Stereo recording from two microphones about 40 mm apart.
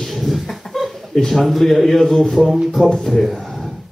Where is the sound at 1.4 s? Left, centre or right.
Centre.